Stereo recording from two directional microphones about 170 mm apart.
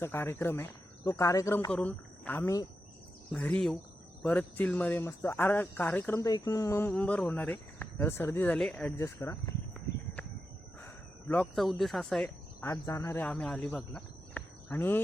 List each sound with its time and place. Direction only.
0.0 s speech: 15° left (ahead or behind)
9.0 s speech: 15° left (ahead or behind)
10.8 s a sound: 10° left (ahead or behind)
12.6 s speech: 20° left (ahead or behind)